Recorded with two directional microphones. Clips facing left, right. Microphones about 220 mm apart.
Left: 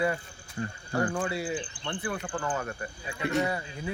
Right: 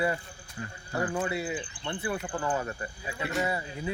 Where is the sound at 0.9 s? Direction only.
5° right (ahead or behind).